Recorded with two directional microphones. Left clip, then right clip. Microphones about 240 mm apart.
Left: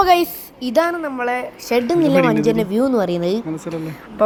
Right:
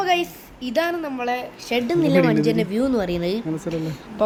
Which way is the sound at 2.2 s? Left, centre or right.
Centre.